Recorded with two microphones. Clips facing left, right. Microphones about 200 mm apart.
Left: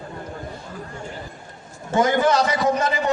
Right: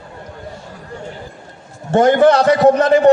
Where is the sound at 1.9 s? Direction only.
65° right (ahead or behind).